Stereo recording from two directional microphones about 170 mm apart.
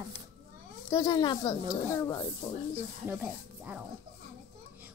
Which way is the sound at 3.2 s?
10° right (ahead or behind).